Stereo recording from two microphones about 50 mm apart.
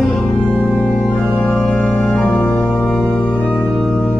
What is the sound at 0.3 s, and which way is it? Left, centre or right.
Music, left.